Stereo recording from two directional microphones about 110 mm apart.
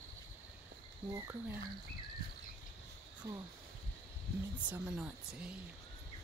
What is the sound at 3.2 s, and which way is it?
Speech, 35° right (ahead or behind).